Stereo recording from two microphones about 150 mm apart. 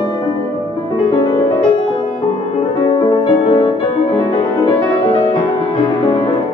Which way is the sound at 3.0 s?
35° left (ahead or behind).